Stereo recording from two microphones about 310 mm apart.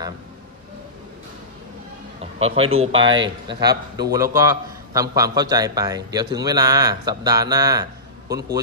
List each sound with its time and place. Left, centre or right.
2.3 s a man's voice: centre